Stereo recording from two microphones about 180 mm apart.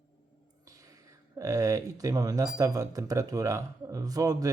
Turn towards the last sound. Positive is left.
turn(degrees=-20)  # may be behind; listen again after turning